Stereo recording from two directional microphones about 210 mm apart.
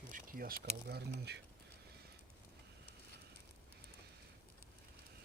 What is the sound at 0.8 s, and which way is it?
Speech, 50° right (ahead or behind).